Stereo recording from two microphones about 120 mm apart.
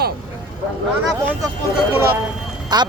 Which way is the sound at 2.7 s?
35° right (ahead or behind).